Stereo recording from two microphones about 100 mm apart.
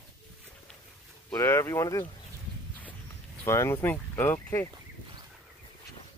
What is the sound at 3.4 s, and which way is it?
Speech, 30° left (ahead or behind).